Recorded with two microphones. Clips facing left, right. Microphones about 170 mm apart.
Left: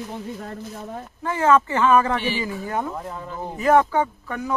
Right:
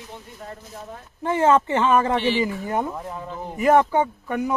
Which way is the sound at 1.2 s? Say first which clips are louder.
Right 1 dB; 20° right (ahead or behind).